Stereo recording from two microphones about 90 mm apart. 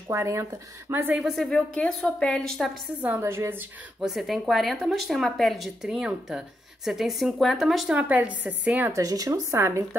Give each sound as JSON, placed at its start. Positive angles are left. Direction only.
{"t": 0.1, "sound": "speech", "side_deg": -35}
{"t": 1.3, "sound": "a woman's voice", "side_deg": 5}
{"t": 3.2, "sound": "a woman's voice", "side_deg": -30}
{"t": 4.0, "sound": "speech", "side_deg": 0}
{"t": 7.9, "sound": "a woman's voice", "side_deg": -15}
{"t": 8.9, "sound": "speech", "side_deg": -40}